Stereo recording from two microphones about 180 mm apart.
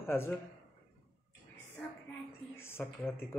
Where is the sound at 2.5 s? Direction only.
15° left (ahead or behind).